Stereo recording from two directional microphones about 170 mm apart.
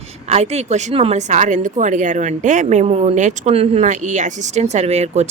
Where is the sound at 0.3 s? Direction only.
40° right (ahead or behind).